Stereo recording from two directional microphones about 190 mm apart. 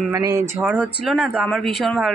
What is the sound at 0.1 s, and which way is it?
Speech, 15° right (ahead or behind).